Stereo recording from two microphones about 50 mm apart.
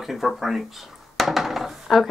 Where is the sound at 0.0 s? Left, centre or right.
Centre.